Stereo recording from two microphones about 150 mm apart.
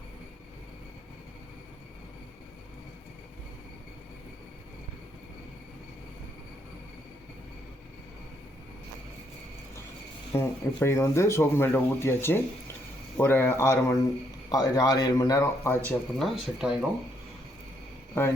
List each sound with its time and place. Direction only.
10.3 s a man's voice: 15° left (ahead or behind)
16.1 s speech: centre (ahead or behind)
18.1 s a man's voice: 15° left (ahead or behind)